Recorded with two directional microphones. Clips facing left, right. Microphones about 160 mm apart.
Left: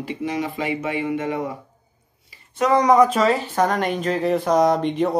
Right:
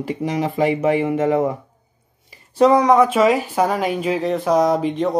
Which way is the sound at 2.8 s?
Centre (ahead or behind).